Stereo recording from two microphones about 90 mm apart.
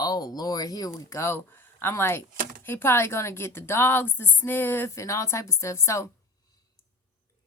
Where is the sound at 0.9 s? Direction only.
35° left (ahead or behind).